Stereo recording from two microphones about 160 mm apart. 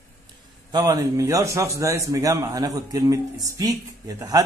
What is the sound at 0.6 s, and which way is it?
A man's voice, 25° right (ahead or behind).